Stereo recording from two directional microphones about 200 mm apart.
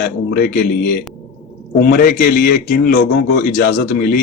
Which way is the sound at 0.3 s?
50° left (ahead or behind).